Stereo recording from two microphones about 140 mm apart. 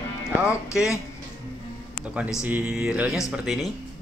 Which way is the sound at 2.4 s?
5° right (ahead or behind).